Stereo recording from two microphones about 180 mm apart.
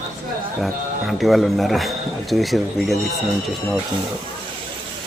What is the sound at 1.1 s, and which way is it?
Speech, centre (ahead or behind).